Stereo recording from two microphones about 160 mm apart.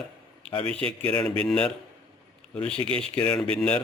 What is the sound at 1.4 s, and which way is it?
A man's voice, 5° left (ahead or behind).